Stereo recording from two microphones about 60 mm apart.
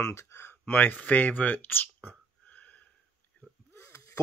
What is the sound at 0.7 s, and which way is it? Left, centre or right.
Speech, left.